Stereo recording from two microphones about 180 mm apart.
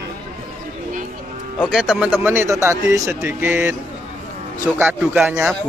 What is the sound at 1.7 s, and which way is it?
Speech, 5° right (ahead or behind).